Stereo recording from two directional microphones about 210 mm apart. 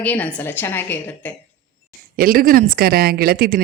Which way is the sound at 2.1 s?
45° right (ahead or behind).